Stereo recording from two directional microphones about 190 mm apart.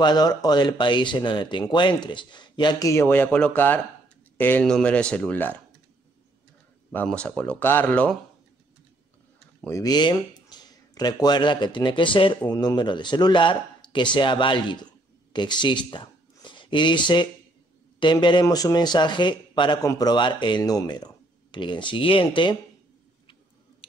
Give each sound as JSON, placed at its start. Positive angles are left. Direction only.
{"t": 0.0, "sound": "speech", "side_deg": 20}
{"t": 6.9, "sound": "speech", "side_deg": 5}
{"t": 9.7, "sound": "speech", "side_deg": 20}
{"t": 23.8, "sound": "a sound", "side_deg": 30}